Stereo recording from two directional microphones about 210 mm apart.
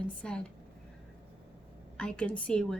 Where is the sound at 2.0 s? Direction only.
5° left (ahead or behind).